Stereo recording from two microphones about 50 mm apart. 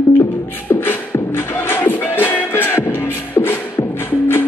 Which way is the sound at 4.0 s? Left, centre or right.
Left.